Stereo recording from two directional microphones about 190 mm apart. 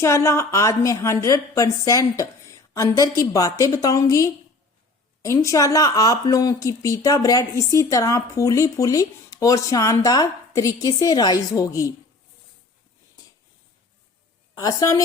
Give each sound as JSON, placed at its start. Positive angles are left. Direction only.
{"t": 0.0, "sound": "a woman's voice", "side_deg": 15}
{"t": 14.5, "sound": "a woman's voice", "side_deg": 20}